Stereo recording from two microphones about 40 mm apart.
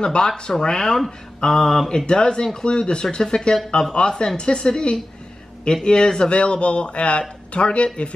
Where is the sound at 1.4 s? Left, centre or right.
Centre.